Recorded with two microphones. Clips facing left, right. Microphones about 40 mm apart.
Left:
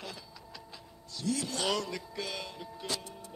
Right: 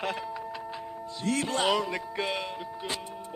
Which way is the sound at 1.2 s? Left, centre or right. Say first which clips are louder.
Right 6 dB; right.